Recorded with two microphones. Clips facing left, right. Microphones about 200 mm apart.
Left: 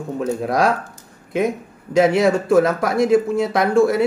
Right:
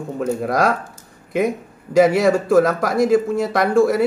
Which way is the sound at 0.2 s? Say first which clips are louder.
Even; centre (ahead or behind).